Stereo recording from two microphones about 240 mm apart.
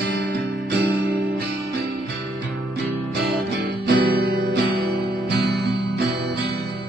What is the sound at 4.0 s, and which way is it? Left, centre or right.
Music, right.